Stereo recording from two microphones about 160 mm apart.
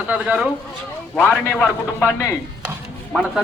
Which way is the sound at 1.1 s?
5° left (ahead or behind).